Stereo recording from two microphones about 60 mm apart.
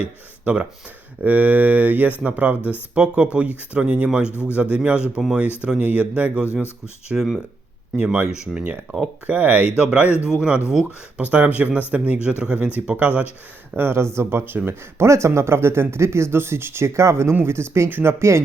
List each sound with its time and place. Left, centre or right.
0.4 s speech: centre
4.3 s speech: left
4.5 s speech: centre
6.4 s speech: left
7.1 s speech: centre
7.9 s speech: centre
9.7 s speech: centre
13.7 s speech: right